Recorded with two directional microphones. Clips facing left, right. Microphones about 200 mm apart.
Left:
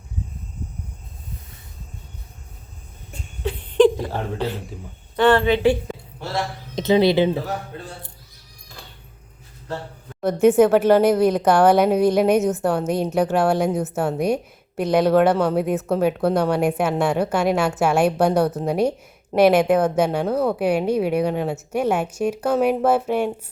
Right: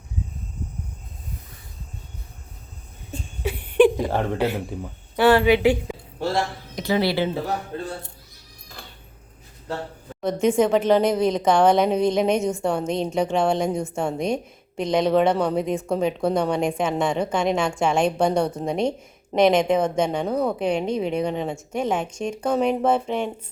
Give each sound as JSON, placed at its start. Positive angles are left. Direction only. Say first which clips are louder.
{"t": 3.4, "sound": "a sound", "louder": "left 1 dB", "side_deg": -10}
{"t": 5.1, "sound": "speech", "louder": "even", "side_deg": -10}
{"t": 6.7, "sound": "speech", "louder": "left 6 dB", "side_deg": 20}
{"t": 10.4, "sound": "a woman's voice", "louder": "left 5 dB", "side_deg": 5}